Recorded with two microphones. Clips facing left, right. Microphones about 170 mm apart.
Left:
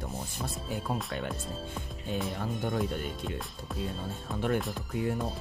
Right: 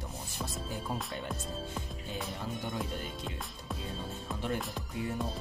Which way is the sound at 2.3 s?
50° left (ahead or behind).